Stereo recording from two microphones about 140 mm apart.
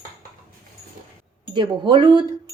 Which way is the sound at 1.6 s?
35° right (ahead or behind).